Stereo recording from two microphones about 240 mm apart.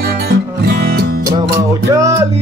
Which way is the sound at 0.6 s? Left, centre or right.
Right.